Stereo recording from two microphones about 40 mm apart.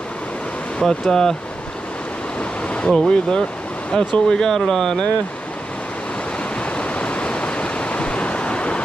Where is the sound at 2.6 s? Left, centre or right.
Left.